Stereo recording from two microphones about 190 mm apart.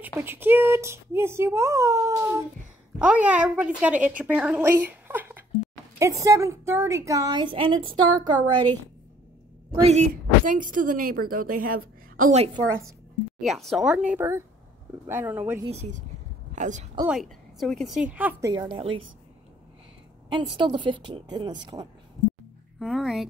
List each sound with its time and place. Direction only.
0.0 s speech: 10° right (ahead or behind)
9.8 s a woman's voice: 40° right (ahead or behind)
13.4 s a woman's voice: centre (ahead or behind)
15.6 s a woman's voice: 35° right (ahead or behind)
17.0 s a woman's voice: centre (ahead or behind)
18.5 s speech: 20° right (ahead or behind)
20.5 s speech: 25° right (ahead or behind)
22.8 s a woman's voice: centre (ahead or behind)